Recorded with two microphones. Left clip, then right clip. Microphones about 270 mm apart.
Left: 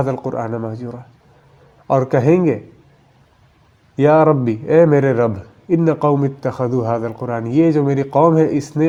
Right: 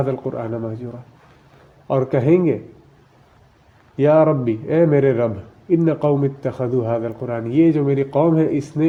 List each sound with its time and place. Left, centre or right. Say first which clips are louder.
0.0 s a man's voice: left 2 dB; left
3.9 s a man's voice: left 2 dB; left